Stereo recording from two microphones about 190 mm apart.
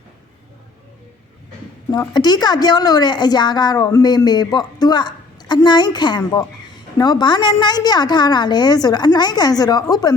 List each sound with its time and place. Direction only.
1.9 s a woman's voice: 20° left (ahead or behind)